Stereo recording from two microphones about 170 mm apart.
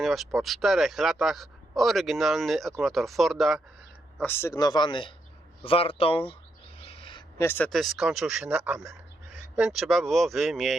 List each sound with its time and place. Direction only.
0.0 s speech: centre (ahead or behind)
4.2 s speech: 10° left (ahead or behind); by 6.3 s 30° left (ahead or behind)
6.7 s owl: 35° left (ahead or behind)
7.3 s speech: 15° left (ahead or behind)